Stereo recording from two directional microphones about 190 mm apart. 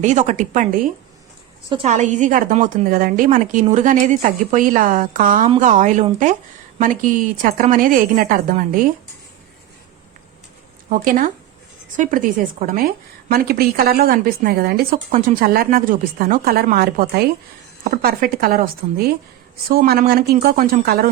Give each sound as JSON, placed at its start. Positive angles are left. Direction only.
{"t": 0.0, "sound": "a woman's voice", "side_deg": -40}
{"t": 1.7, "sound": "a woman's voice", "side_deg": -35}
{"t": 10.8, "sound": "a woman's voice", "side_deg": -45}